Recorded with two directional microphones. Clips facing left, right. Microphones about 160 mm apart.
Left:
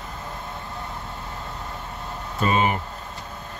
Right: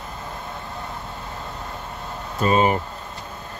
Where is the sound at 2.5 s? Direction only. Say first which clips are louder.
Right 4 dB; 35° right (ahead or behind).